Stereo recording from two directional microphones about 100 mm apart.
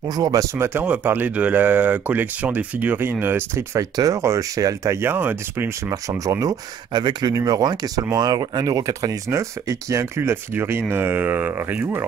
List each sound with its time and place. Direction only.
0.1 s speech: 40° right (ahead or behind)
0.6 s speech: 15° right (ahead or behind)
3.9 s speech: 35° right (ahead or behind); by 5.7 s 20° right (ahead or behind)
5.9 s speech: 35° right (ahead or behind)